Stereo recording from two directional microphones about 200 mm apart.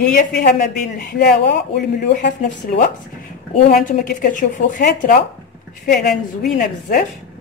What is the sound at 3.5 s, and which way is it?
Speech, 35° left (ahead or behind).